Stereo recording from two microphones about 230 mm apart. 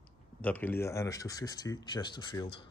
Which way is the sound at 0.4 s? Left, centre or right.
Centre.